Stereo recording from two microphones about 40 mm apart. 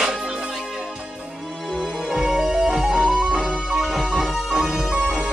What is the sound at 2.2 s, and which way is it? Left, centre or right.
Music, centre.